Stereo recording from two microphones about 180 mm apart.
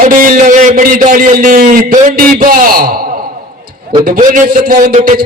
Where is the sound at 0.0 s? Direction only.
50° right (ahead or behind).